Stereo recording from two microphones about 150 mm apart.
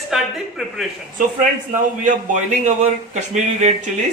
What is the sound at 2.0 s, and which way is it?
A man's voice, 55° right (ahead or behind).